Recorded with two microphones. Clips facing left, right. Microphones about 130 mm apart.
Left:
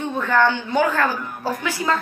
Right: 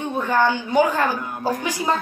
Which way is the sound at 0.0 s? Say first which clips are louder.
Left 1 dB; 15° right (ahead or behind).